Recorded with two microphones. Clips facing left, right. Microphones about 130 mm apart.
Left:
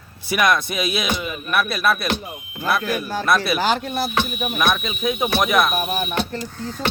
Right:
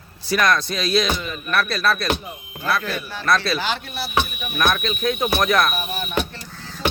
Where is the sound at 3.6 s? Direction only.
40° left (ahead or behind).